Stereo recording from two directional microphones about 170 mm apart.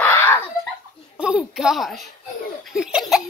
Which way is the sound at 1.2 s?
5° right (ahead or behind).